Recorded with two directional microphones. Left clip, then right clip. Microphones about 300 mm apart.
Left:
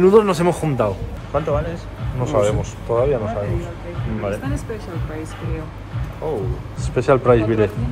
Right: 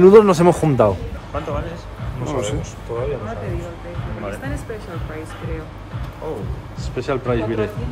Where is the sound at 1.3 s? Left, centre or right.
Left.